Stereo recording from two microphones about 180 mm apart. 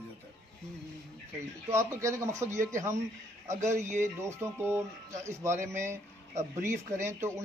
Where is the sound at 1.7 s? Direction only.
15° right (ahead or behind).